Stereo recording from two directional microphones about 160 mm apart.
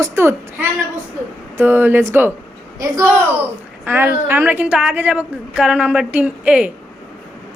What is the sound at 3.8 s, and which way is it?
A woman's voice, 10° right (ahead or behind).